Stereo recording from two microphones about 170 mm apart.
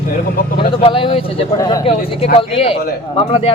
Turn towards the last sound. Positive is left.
turn(degrees=35)  # may be behind; listen again after turning